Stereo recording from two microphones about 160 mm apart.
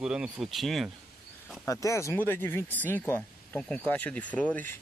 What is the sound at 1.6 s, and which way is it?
Speech, 20° left (ahead or behind).